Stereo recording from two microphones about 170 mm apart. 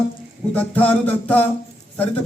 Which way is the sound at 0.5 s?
10° left (ahead or behind).